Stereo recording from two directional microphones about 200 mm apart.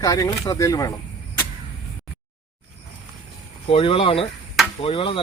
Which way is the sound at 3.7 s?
25° left (ahead or behind).